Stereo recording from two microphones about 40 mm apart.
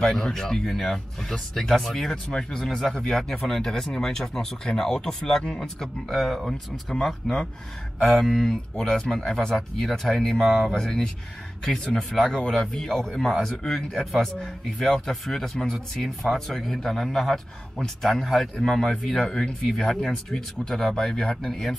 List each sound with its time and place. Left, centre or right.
0.0 s speech: centre
6.0 s speech: centre
18.6 s speech: centre
18.9 s speech: centre
21.4 s speech: centre